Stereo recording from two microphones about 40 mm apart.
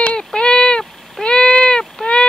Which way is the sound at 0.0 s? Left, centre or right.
Left.